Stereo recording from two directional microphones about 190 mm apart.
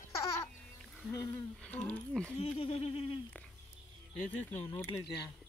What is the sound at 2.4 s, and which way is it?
Speech, 30° left (ahead or behind).